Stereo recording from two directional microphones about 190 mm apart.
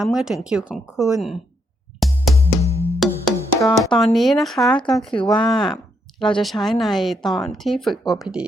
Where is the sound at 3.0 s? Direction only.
Centre (ahead or behind).